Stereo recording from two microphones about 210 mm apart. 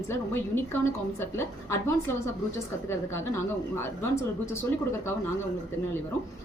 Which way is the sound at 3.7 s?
10° left (ahead or behind).